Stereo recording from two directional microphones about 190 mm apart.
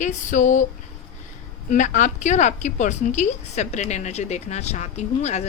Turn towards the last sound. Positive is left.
turn(degrees=35)  # may be behind; listen again after turning